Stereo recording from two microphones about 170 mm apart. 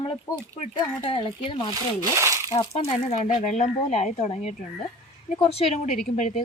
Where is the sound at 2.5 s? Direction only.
35° left (ahead or behind).